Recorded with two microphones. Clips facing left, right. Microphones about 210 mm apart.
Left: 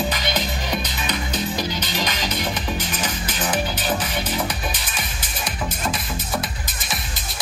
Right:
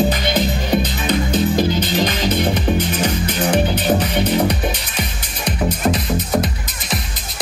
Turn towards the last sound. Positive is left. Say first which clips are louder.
# right 8 dB
turn(degrees=-65)  # may be behind; listen again after turning